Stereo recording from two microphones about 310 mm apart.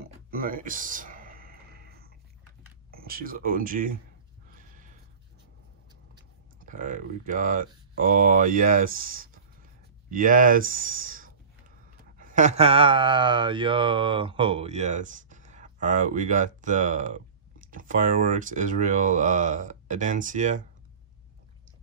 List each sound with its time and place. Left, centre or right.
0.0 s a sound: right
2.9 s speech: right
4.5 s horse: right
6.6 s speech: right